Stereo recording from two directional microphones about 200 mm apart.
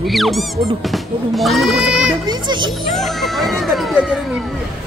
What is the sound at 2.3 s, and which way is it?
Speech, 20° right (ahead or behind).